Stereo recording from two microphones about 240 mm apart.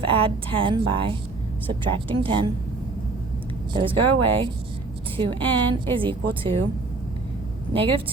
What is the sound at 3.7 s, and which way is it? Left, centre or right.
Speech, right.